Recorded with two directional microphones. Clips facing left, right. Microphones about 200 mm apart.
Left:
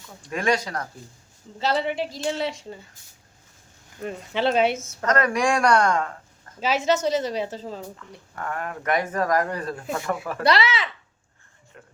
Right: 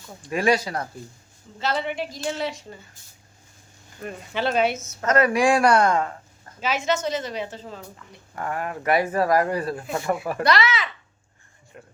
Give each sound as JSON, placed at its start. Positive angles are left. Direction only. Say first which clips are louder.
{"t": 0.2, "sound": "speech", "louder": "right 3 dB", "side_deg": -10}
{"t": 1.8, "sound": "speech", "louder": "left 2 dB", "side_deg": 30}
{"t": 4.0, "sound": "speech", "louder": "left 2 dB", "side_deg": 25}
{"t": 5.0, "sound": "speech", "louder": "right 3 dB", "side_deg": -5}
{"t": 6.6, "sound": "a woman's voice", "louder": "left 2 dB", "side_deg": 35}
{"t": 7.9, "sound": "speech", "louder": "right 2 dB", "side_deg": -10}
{"t": 10.4, "sound": "a woman's voice", "louder": "left 1 dB", "side_deg": 30}